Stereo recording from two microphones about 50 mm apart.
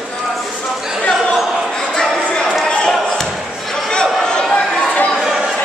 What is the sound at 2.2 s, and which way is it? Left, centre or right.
Chatter, left.